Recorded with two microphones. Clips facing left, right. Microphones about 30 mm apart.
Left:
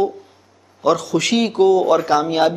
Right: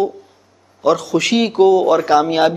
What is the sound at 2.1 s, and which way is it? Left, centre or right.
Speech, centre.